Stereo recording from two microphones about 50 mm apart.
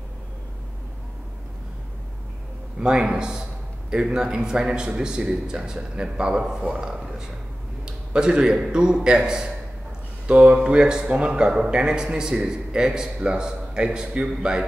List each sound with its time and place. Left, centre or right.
2.8 s a man's voice: centre
7.8 s a sound: centre
8.7 s a man's voice: centre